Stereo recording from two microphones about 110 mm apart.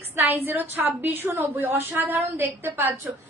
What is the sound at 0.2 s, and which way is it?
A woman's voice, 20° right (ahead or behind).